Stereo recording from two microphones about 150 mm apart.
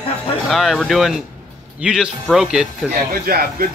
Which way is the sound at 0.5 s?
Centre (ahead or behind).